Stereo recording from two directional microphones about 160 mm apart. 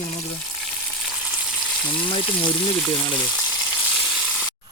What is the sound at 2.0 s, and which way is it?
Speech, 30° left (ahead or behind).